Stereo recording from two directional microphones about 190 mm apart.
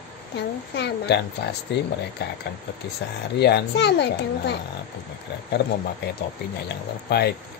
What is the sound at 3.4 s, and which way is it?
Speech, 60° left (ahead or behind).